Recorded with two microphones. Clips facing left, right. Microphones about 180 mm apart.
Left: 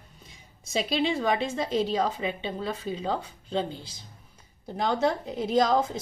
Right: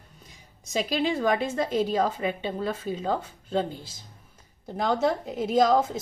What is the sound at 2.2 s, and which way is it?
Speech, 50° right (ahead or behind).